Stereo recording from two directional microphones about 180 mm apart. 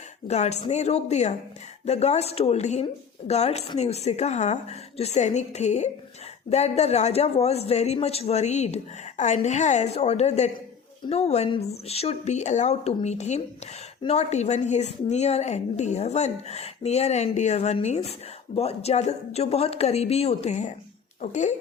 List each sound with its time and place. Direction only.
0.3 s a woman's voice: 40° left (ahead or behind)